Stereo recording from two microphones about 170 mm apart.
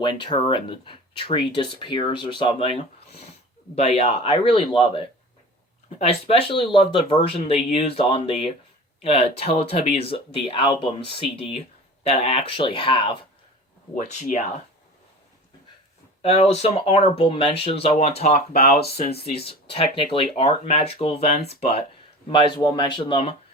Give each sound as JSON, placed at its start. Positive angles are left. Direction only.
{"t": 0.0, "sound": "speech", "side_deg": 25}
{"t": 13.9, "sound": "speech", "side_deg": 45}
{"t": 16.2, "sound": "speech", "side_deg": 35}
{"t": 18.5, "sound": "speech", "side_deg": 65}
{"t": 19.5, "sound": "speech", "side_deg": 35}